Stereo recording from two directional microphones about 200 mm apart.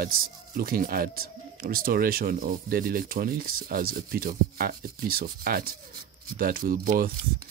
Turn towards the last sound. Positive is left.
turn(degrees=-45)  # may be behind; listen again after turning